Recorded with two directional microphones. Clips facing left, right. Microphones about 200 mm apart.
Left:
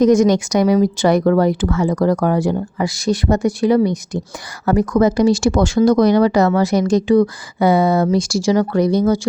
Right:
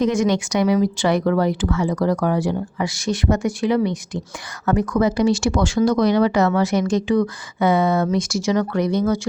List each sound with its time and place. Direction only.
0.0 s speech: 40° left (ahead or behind)